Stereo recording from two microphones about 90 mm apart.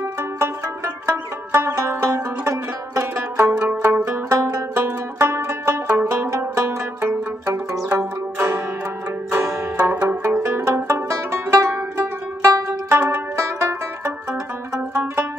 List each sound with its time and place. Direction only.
1.0 s music: 35° right (ahead or behind)
3.6 s zither: 20° right (ahead or behind)
4.0 s music: 40° right (ahead or behind)
7.9 s zither: 30° right (ahead or behind)
9.3 s music: 30° right (ahead or behind)
9.8 s music: 20° right (ahead or behind)
10.4 s music: 35° right (ahead or behind)